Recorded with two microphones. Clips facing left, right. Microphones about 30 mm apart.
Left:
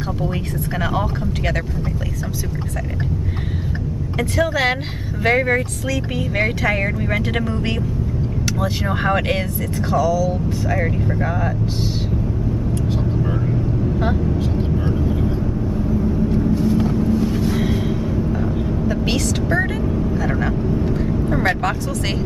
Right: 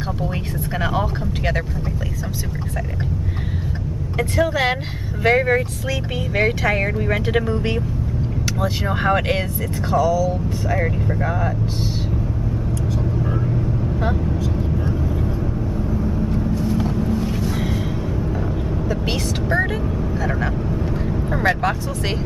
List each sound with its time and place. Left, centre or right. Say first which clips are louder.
0.7 s speech: even; centre
4.2 s speech: even; centre
9.9 s speech: even; centre
10.7 s speech: even; centre
13.2 s vehicle: left 1 dB; centre
16.2 s vehicle: left 4 dB; centre
17.4 s vehicle: left 4 dB; centre
19.1 s speech: left 1 dB; centre